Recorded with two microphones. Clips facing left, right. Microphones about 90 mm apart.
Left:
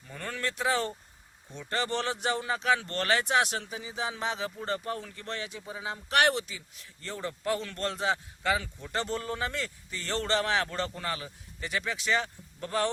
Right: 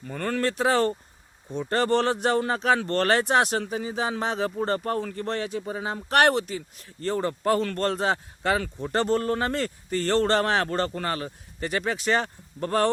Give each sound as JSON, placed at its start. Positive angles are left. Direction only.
{"t": 0.1, "sound": "speech", "side_deg": -55}
{"t": 0.4, "sound": "speech", "side_deg": -45}
{"t": 1.5, "sound": "speech", "side_deg": -45}